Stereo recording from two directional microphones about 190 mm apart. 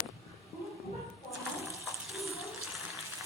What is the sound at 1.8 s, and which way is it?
Bathtub, centre (ahead or behind).